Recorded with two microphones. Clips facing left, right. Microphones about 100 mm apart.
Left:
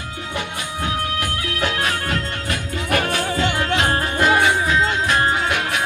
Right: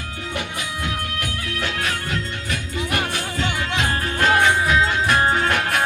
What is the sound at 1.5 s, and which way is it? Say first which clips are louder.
Music: left 3 dB; 55° left (ahead or behind).